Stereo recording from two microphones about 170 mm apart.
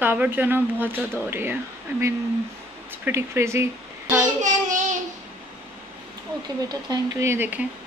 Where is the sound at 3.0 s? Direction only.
15° right (ahead or behind).